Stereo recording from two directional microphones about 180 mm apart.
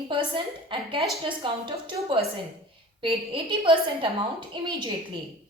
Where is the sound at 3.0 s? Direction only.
30° right (ahead or behind).